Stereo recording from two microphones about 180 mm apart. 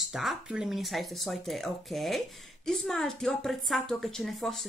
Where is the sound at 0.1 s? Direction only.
Centre (ahead or behind).